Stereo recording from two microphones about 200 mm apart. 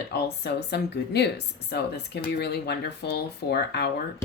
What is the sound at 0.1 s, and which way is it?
Speech, 55° left (ahead or behind).